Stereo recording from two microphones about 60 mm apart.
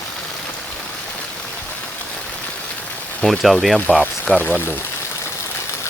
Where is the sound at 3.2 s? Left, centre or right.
Centre.